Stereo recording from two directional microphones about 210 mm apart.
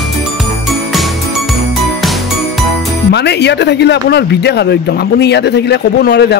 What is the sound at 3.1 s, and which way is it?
Speech, 50° left (ahead or behind).